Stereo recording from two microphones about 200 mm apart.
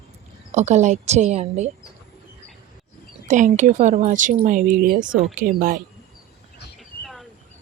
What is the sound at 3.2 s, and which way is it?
A woman's voice, 40° right (ahead or behind).